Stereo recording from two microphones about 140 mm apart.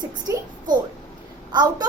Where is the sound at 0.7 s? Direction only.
70° right (ahead or behind).